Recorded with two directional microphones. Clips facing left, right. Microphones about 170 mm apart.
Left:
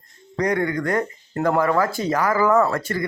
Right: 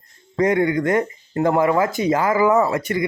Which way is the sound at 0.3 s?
25° right (ahead or behind).